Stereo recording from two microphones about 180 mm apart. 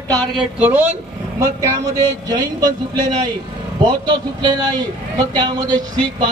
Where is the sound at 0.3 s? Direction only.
10° right (ahead or behind).